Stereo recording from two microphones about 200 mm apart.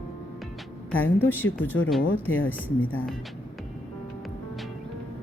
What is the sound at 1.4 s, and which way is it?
Speech, 80° left.